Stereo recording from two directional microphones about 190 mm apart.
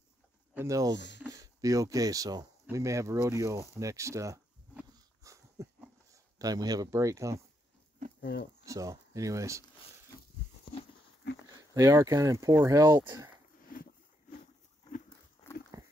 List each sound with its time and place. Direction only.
0.6 s speech: 15° right (ahead or behind)
0.9 s speech: 65° left (ahead or behind)
1.2 s speech: 20° right (ahead or behind)
2.6 s a sound: 15° right (ahead or behind)
6.3 s speech: 20° right (ahead or behind)
8.2 s speech: 65° left (ahead or behind)
8.6 s speech: 15° right (ahead or behind)
11.7 s speech: 15° right (ahead or behind)
15.4 s dog: 25° left (ahead or behind)